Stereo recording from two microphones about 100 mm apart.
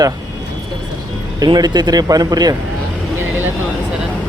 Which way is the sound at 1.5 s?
45° right (ahead or behind).